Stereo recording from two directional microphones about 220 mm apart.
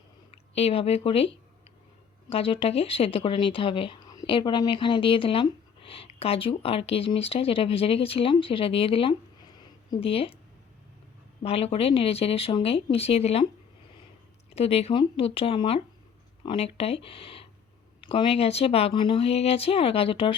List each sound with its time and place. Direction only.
0.5 s speech: 25° left (ahead or behind)
2.3 s speech: 25° left (ahead or behind)
11.4 s speech: 25° left (ahead or behind)
14.5 s speech: 25° left (ahead or behind)